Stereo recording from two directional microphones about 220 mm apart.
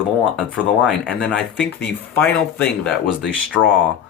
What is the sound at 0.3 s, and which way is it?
Speech, 5° right (ahead or behind).